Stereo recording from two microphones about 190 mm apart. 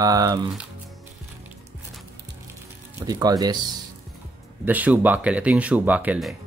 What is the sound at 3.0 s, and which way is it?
Speech, 20° right (ahead or behind).